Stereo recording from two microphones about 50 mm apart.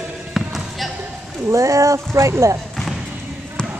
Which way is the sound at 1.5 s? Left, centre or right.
Right.